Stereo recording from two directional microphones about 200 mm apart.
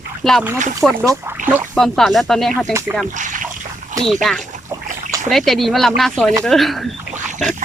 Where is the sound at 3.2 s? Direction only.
40° right (ahead or behind).